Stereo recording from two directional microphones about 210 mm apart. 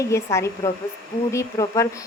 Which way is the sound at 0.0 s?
15° left (ahead or behind).